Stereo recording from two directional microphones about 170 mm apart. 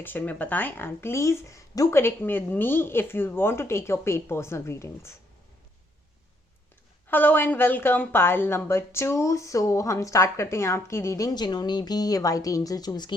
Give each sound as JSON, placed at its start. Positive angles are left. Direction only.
{"t": 0.0, "sound": "a woman's voice", "side_deg": 10}
{"t": 7.1, "sound": "a woman's voice", "side_deg": 10}